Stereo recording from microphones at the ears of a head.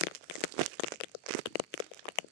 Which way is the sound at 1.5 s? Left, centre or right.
Left.